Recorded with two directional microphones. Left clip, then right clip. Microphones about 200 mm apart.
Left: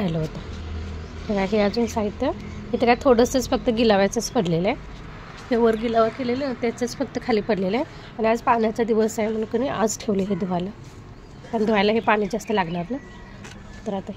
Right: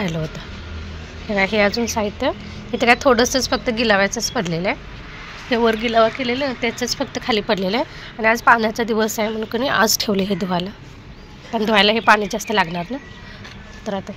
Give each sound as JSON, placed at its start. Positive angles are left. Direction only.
{"t": 1.3, "sound": "a woman's voice", "side_deg": 10}
{"t": 5.5, "sound": "a woman's voice", "side_deg": 5}